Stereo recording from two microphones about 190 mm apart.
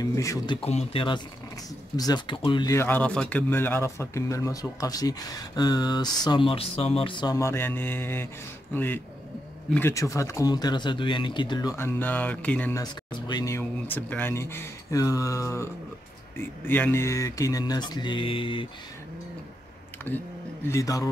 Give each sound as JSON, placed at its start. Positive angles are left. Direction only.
{"t": 0.0, "sound": "speech", "side_deg": 15}
{"t": 0.6, "sound": "speech", "side_deg": 30}
{"t": 12.8, "sound": "speech", "side_deg": 20}
{"t": 20.1, "sound": "speech", "side_deg": 10}